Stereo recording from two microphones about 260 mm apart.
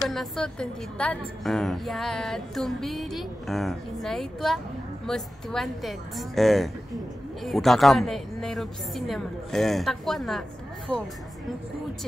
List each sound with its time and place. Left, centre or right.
0.0 s a woman's voice: centre